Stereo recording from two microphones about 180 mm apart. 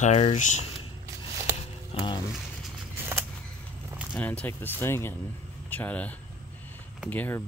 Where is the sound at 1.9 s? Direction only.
25° left (ahead or behind).